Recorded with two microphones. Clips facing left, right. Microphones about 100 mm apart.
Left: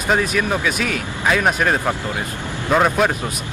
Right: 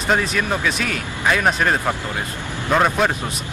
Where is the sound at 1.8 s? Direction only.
15° left (ahead or behind).